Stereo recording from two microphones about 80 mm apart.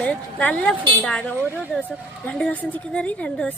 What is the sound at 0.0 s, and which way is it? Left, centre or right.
Speech, centre.